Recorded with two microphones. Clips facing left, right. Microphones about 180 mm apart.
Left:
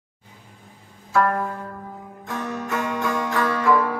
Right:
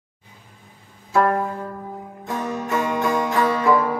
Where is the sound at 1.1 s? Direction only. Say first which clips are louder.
Right 2 dB; 20° right (ahead or behind).